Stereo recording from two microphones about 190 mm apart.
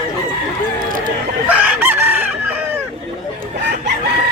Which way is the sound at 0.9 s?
45° right (ahead or behind).